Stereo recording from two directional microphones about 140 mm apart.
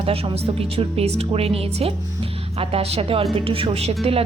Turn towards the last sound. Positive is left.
turn(degrees=-45)  # may be behind; listen again after turning